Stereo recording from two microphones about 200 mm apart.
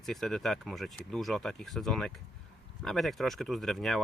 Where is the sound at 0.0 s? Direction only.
Centre (ahead or behind).